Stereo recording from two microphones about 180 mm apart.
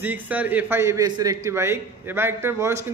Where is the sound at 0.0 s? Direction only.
10° right (ahead or behind).